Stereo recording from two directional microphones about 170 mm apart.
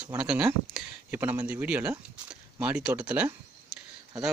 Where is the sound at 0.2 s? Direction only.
5° right (ahead or behind).